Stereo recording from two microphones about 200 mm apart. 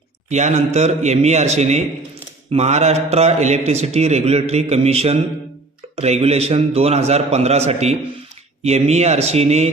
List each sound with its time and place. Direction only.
0.3 s a man's voice: 35° right (ahead or behind)